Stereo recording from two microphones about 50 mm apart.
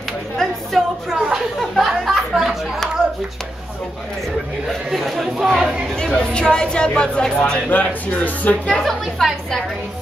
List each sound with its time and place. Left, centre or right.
1.1 s chatter: centre
1.6 s a sound: centre
4.9 s speech: centre
6.1 s speech: centre
7.7 s speech: left
8.6 s a woman's voice: centre